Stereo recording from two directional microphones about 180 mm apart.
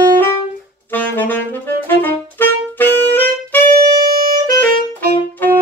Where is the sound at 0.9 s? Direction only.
10° left (ahead or behind).